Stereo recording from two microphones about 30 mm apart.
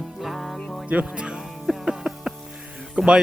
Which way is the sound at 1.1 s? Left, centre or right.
Right.